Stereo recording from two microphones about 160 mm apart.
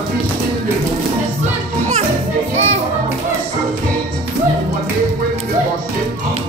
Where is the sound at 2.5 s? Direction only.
45° right (ahead or behind).